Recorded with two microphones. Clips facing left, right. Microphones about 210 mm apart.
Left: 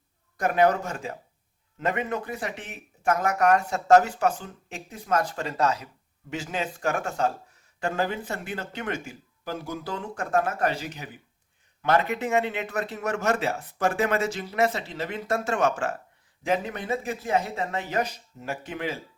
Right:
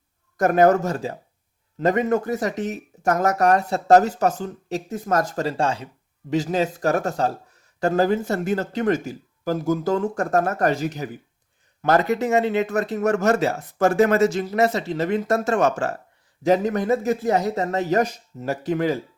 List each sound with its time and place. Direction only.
0.3 s speech: 45° right (ahead or behind)